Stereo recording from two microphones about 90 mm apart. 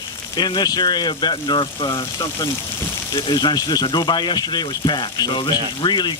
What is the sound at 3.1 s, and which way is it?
Speech, 60° left (ahead or behind).